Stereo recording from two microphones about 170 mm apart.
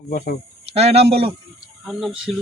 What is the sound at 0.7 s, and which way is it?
Speech, 35° right (ahead or behind).